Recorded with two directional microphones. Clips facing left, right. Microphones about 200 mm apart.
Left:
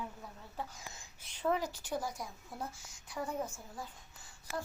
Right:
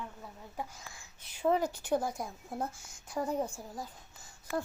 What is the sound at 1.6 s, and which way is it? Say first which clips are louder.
A woman's voice: right 6 dB; 55° right (ahead or behind).